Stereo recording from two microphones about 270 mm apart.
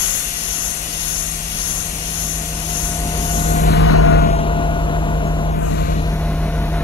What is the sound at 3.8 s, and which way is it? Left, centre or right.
Vehicle, left.